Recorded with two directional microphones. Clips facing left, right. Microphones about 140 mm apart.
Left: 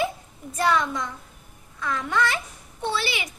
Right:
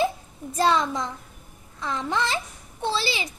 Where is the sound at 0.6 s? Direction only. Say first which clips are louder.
Right 1 dB; 30° right (ahead or behind).